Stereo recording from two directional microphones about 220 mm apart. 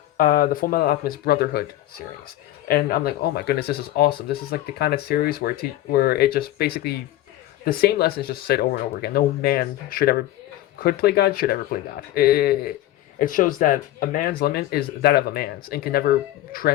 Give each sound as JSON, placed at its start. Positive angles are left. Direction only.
{"t": 0.2, "sound": "speech", "side_deg": 40}
{"t": 2.6, "sound": "speech", "side_deg": 45}